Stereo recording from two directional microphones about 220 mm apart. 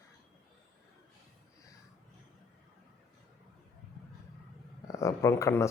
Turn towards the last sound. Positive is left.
turn(degrees=15)  # may be behind; listen again after turning